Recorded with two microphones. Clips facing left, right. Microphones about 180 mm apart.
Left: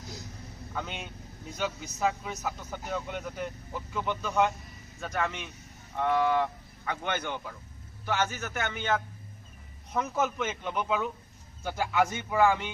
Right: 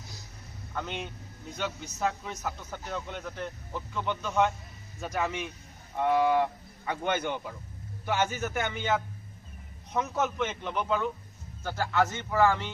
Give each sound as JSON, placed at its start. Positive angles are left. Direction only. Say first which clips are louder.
{"t": 0.7, "sound": "a man's voice", "louder": "right 2 dB", "side_deg": 5}
{"t": 9.9, "sound": "a man's voice", "louder": "even", "side_deg": 0}